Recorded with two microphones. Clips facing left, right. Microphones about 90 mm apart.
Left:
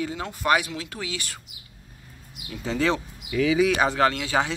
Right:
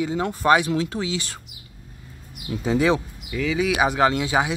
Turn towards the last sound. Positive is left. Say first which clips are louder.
# right 2 dB
turn(degrees=-15)  # may be behind; listen again after turning